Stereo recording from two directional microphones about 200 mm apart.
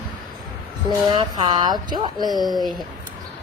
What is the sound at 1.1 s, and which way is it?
Speech, 20° right (ahead or behind).